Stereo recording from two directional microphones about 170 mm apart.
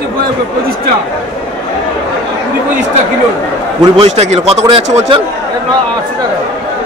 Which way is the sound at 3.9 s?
40° right (ahead or behind).